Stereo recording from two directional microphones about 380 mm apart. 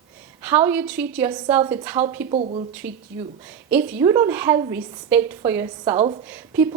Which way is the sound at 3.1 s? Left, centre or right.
Centre.